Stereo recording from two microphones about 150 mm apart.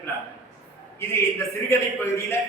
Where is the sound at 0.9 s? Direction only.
15° left (ahead or behind).